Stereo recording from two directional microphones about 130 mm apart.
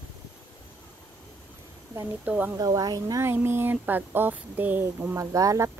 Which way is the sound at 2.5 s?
30° right (ahead or behind).